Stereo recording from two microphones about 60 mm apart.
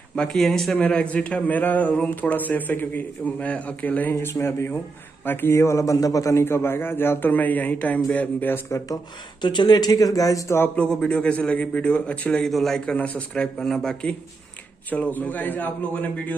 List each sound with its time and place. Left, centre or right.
0.1 s speech: centre
0.4 s speech: centre
0.9 s speech: left
4.1 s a man's voice: left
6.3 s a man's voice: left
9.8 s speech: left
10.8 s speech: centre
12.3 s a man's voice: centre
12.9 s speech: left
13.6 s a man's voice: centre
14.9 s speech: left